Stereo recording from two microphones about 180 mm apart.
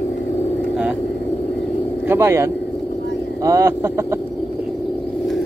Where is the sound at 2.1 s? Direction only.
15° right (ahead or behind).